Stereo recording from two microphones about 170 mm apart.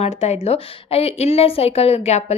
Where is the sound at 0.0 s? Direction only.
40° left (ahead or behind).